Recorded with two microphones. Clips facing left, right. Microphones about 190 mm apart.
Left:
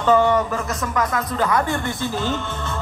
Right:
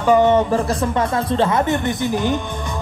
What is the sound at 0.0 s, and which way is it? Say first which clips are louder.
Speech: right 3 dB; 15° right (ahead or behind).